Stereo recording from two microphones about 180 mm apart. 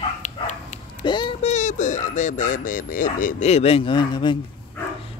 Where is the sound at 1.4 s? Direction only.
40° left (ahead or behind); by 4.4 s 25° left (ahead or behind).